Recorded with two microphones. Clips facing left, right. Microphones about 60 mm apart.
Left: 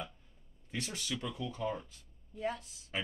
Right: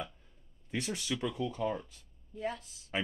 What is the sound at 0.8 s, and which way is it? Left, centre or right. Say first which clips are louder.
Speech: right 5 dB; centre.